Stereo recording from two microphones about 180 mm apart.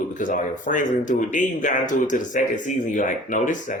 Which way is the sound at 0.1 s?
45° left (ahead or behind).